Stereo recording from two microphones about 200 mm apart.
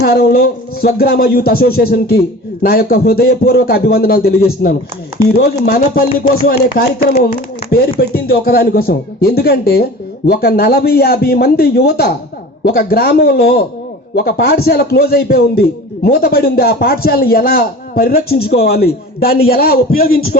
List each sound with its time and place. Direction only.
0.0 s speech: 50° left (ahead or behind)